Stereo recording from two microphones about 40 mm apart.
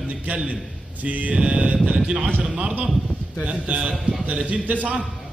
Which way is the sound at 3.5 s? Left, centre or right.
Right.